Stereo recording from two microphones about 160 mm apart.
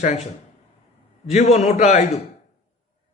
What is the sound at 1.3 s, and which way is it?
Speech, 45° left (ahead or behind).